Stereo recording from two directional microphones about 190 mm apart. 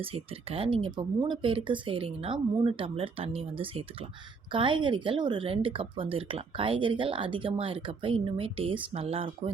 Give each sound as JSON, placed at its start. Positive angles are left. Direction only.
{"t": 0.0, "sound": "a woman's voice", "side_deg": -30}